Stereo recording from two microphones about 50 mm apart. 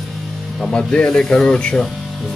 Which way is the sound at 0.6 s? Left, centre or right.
Centre.